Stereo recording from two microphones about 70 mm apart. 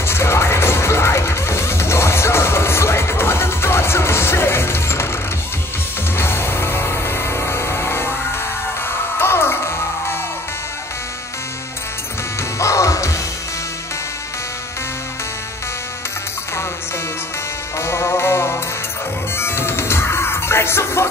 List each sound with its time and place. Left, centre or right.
0.0 s music: left
6.1 s music: left
9.2 s music: left
12.5 s music: left
17.7 s music: left